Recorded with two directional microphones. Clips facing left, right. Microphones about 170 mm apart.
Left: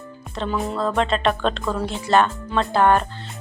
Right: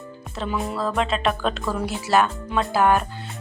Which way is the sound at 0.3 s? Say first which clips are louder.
Left 2 dB; centre (ahead or behind).